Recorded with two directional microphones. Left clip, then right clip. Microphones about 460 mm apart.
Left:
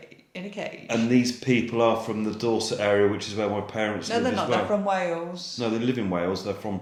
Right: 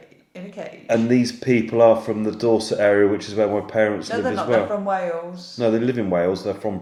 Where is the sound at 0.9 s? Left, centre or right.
Centre.